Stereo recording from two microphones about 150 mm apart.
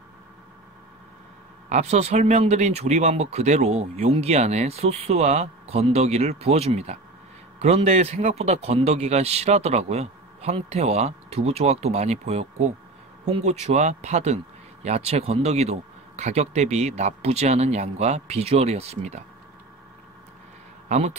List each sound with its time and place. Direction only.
1.7 s speech: 45° right (ahead or behind)
20.9 s speech: 50° right (ahead or behind)